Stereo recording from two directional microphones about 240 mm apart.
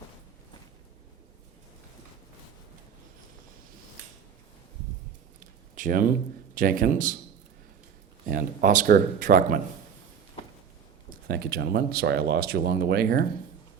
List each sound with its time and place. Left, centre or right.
5.7 s speech: right
8.3 s speech: right
11.3 s speech: right